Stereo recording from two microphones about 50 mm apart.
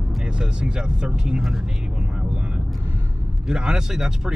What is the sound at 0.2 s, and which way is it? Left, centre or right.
Speech, centre.